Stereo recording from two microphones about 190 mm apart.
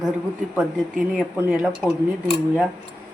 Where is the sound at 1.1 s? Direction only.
5° right (ahead or behind).